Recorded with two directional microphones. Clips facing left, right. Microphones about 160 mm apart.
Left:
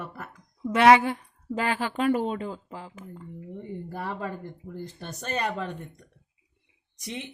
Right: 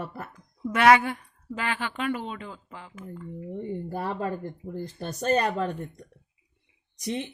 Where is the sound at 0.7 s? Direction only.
30° left (ahead or behind).